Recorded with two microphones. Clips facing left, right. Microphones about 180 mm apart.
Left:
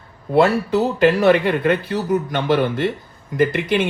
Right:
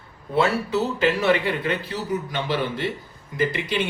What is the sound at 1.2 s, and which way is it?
Speech, 55° left (ahead or behind).